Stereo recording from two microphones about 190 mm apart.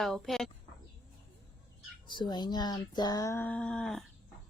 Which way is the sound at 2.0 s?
25° left (ahead or behind).